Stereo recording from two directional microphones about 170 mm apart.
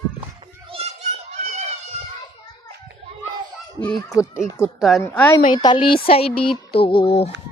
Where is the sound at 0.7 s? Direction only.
35° right (ahead or behind).